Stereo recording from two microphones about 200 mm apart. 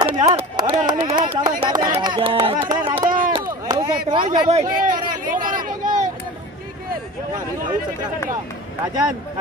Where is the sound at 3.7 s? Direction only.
20° right (ahead or behind).